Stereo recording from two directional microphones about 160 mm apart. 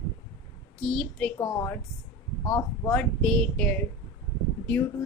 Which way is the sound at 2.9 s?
5° left (ahead or behind).